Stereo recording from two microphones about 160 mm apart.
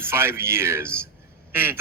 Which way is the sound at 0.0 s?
15° right (ahead or behind).